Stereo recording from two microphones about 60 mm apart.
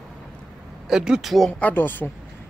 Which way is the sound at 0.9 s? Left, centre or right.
Centre.